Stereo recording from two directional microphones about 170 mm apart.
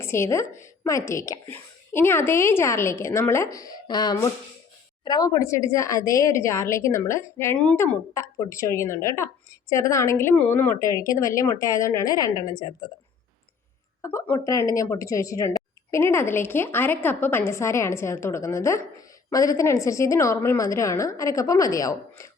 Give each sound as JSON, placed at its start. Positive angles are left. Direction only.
{"t": 0.0, "sound": "speech", "side_deg": 15}
{"t": 8.1, "sound": "speech", "side_deg": 20}
{"t": 14.0, "sound": "a woman's voice", "side_deg": 15}